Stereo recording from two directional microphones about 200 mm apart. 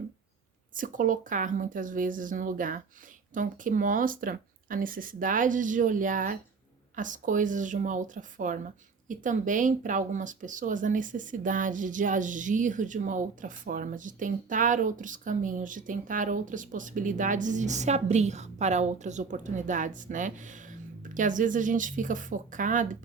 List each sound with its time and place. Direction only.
0.7 s speech: 40° right (ahead or behind)